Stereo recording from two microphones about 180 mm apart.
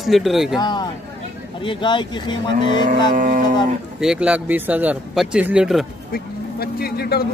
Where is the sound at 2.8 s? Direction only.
45° right (ahead or behind).